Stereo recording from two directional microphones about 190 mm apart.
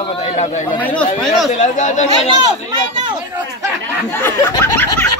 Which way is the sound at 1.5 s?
40° left (ahead or behind).